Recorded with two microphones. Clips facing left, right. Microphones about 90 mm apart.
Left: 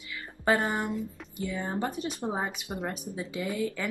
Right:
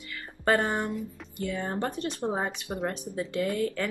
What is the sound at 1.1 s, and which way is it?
Speech, 5° left (ahead or behind).